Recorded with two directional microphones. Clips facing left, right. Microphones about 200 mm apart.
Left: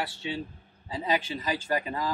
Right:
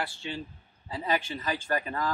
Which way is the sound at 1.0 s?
15° left (ahead or behind).